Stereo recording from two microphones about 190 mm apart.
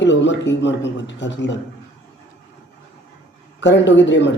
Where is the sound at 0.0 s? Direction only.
70° left (ahead or behind).